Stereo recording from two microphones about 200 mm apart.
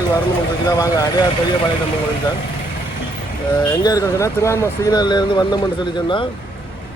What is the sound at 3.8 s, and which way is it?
Speech, 15° left (ahead or behind).